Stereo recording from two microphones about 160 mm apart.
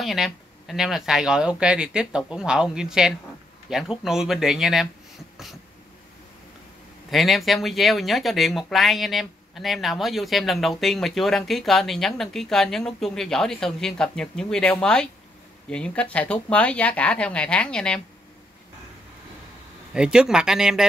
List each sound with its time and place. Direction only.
0.0 s speech: centre (ahead or behind)
7.1 s speech: centre (ahead or behind)
19.9 s speech: 5° right (ahead or behind)